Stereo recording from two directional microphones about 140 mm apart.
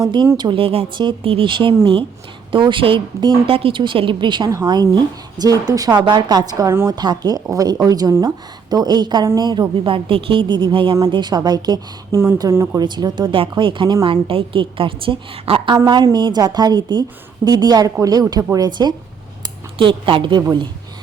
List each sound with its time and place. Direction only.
0.0 s speech: 35° right (ahead or behind)